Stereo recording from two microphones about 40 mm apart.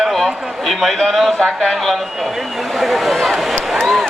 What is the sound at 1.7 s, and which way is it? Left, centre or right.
A man's voice, centre.